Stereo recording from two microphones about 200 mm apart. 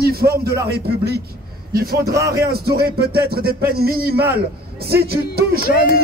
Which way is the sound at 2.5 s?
50° right (ahead or behind).